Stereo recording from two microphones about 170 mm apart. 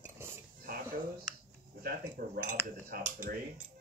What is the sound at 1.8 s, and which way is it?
Speech, 55° right (ahead or behind).